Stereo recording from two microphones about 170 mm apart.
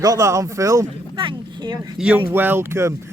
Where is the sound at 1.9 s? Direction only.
5° right (ahead or behind).